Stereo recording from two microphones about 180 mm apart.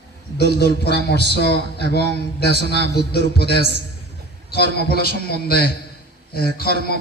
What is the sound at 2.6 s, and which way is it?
Speech, 70° right (ahead or behind).